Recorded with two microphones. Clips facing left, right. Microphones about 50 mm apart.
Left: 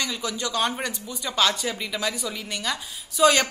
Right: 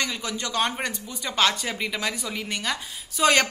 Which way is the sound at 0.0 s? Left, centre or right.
Right.